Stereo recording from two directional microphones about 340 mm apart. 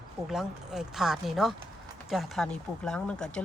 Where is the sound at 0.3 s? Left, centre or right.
Centre.